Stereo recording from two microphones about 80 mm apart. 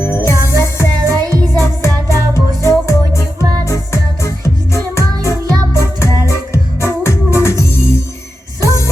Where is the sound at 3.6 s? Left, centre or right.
Left.